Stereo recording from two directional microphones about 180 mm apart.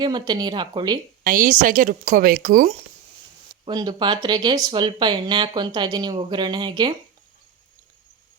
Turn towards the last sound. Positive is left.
turn(degrees=-25)  # may be behind; listen again after turning